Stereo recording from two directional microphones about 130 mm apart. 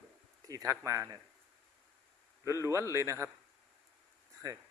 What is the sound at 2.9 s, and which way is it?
Speech, 20° right (ahead or behind).